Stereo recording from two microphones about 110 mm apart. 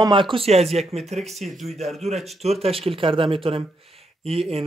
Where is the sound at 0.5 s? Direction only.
70° right (ahead or behind).